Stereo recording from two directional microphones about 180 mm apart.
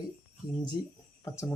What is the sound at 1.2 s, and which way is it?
Speech, 15° left (ahead or behind).